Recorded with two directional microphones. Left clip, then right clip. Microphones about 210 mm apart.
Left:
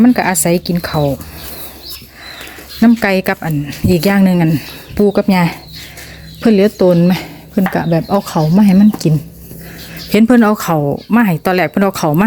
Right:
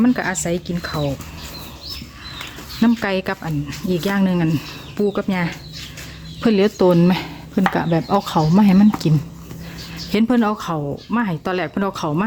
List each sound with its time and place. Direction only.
0.0 s speech: 20° left (ahead or behind)
2.8 s speech: 15° left (ahead or behind)
5.3 s speech: 25° left (ahead or behind)
6.4 s speech: 5° left (ahead or behind)
10.1 s speech: 15° left (ahead or behind)